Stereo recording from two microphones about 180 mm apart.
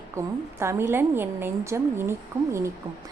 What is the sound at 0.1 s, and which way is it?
A woman's voice, 15° right (ahead or behind).